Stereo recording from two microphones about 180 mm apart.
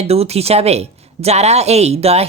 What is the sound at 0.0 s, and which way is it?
Speech, 35° right (ahead or behind).